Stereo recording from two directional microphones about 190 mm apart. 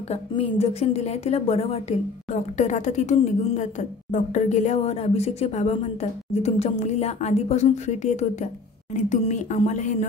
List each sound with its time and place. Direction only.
0.1 s a woman's voice: 30° left (ahead or behind)